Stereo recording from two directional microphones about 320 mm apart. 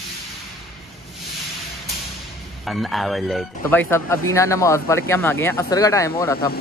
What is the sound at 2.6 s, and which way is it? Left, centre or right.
Speech, centre.